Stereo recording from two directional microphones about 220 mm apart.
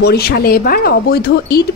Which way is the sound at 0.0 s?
45° left (ahead or behind).